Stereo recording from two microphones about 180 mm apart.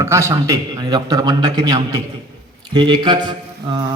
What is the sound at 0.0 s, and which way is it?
A man's voice, 15° right (ahead or behind).